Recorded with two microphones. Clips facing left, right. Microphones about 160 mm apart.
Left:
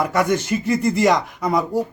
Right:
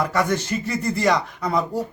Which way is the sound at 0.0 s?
10° left (ahead or behind).